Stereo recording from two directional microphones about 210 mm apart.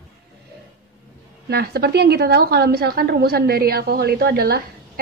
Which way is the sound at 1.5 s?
50° right (ahead or behind).